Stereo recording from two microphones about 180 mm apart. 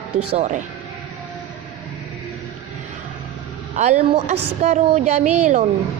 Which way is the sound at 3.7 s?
40° right (ahead or behind).